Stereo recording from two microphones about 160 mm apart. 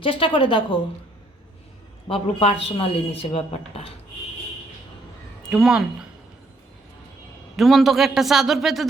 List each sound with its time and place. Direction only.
0.0 s speech: 35° left (ahead or behind)
2.0 s speech: 35° left (ahead or behind)
5.5 s a man's voice: 5° right (ahead or behind)
7.5 s a man's voice: centre (ahead or behind)